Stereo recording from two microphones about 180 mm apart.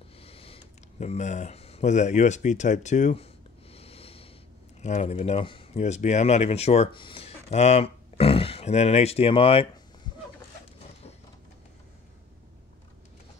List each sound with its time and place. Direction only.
0.2 s speech: 30° left (ahead or behind)
3.7 s snort: 35° left (ahead or behind)
4.8 s speech: 40° left (ahead or behind)